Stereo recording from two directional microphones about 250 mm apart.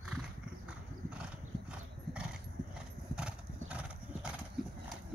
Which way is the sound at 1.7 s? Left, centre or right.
Centre.